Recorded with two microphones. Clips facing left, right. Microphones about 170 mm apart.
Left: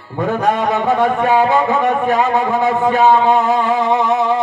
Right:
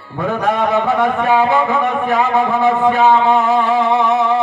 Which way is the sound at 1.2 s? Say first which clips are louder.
Even; 20° left (ahead or behind).